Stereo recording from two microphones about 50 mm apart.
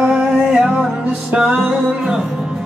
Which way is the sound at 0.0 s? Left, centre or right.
Centre.